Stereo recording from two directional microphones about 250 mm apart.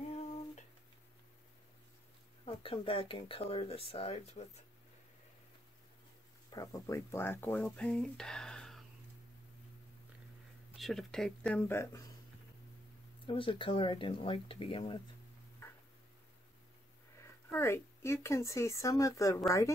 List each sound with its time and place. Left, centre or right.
2.4 s speech: left
6.5 s speech: centre
10.8 s speech: centre
13.3 s speech: left
15.6 s tick-tock: centre
17.2 s speech: centre